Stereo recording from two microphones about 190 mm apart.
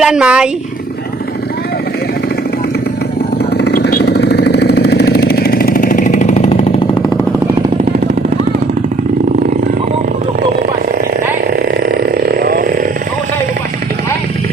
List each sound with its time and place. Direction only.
0.0 s speech: 5° right (ahead or behind)
3.6 s vehicle: 55° left (ahead or behind); by 6.7 s 35° left (ahead or behind)
12.4 s a sound: 50° right (ahead or behind)